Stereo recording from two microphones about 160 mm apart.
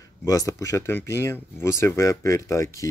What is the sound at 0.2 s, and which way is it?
Speech, 20° left (ahead or behind).